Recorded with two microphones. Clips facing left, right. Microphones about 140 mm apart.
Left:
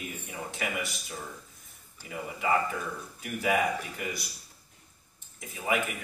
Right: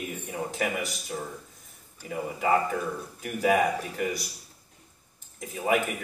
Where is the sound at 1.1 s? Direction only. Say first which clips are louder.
Right 6 dB; 40° right (ahead or behind).